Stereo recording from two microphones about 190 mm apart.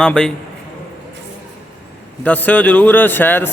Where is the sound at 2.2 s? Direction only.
10° left (ahead or behind).